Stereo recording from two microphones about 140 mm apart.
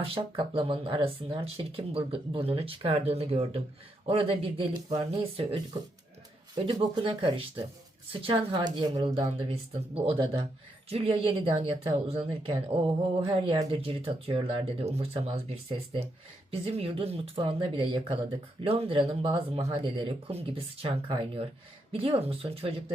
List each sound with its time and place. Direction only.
0.0 s speech: 40° right (ahead or behind)
6.9 s speech: 35° right (ahead or behind)
9.1 s speech: 45° right (ahead or behind)